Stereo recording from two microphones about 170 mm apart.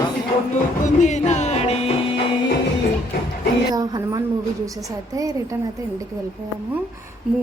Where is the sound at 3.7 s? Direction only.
20° right (ahead or behind).